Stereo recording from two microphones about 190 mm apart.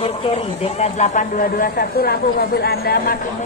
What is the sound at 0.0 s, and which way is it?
Speech, 35° left (ahead or behind).